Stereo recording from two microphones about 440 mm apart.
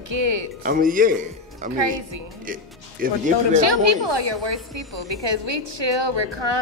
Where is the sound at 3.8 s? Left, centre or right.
Right.